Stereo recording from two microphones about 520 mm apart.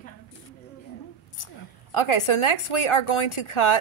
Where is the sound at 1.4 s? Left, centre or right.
Left.